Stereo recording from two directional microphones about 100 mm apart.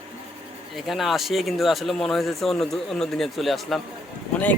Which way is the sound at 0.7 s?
Centre (ahead or behind).